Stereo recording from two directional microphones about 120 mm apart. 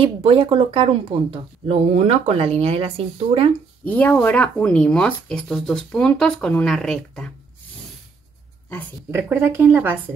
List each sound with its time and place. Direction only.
0.0 s speech: 50° right (ahead or behind)
3.8 s speech: 15° left (ahead or behind)
9.1 s speech: 20° right (ahead or behind)